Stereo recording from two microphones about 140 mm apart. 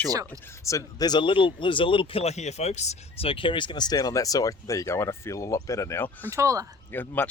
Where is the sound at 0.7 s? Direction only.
25° left (ahead or behind).